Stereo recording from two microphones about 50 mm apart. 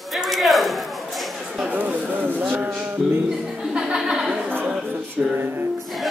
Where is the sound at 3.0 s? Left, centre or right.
Centre.